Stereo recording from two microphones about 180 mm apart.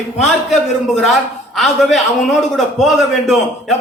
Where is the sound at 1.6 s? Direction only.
Centre (ahead or behind).